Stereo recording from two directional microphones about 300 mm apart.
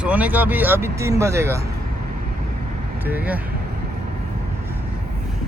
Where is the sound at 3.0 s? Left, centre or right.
Centre.